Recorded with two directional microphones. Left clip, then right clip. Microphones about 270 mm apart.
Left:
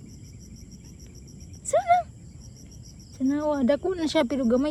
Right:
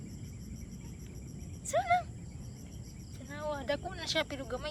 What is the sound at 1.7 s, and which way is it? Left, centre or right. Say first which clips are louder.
Cricket: left 8 dB; centre.